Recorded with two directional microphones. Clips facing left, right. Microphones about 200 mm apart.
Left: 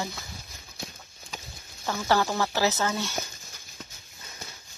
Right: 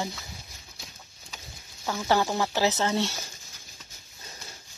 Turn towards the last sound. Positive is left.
turn(degrees=-25)  # may be behind; listen again after turning